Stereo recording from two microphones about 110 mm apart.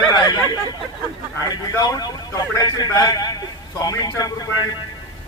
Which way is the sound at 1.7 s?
35° left (ahead or behind).